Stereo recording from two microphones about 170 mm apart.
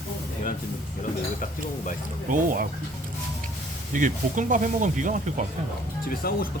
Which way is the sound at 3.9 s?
50° right (ahead or behind).